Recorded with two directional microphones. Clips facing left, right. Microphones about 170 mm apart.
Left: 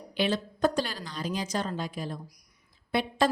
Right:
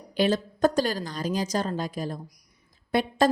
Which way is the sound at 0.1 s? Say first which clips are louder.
Right 4 dB; 40° right (ahead or behind).